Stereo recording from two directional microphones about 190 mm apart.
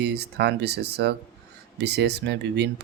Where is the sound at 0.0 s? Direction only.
60° right (ahead or behind).